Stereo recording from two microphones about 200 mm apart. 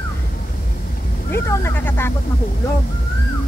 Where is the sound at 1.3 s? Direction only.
10° left (ahead or behind).